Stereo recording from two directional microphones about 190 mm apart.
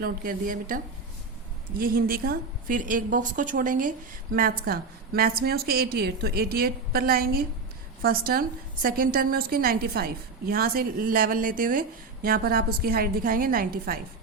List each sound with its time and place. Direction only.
0.0 s a woman's voice: 50° right (ahead or behind)
1.8 s a woman's voice: 50° right (ahead or behind)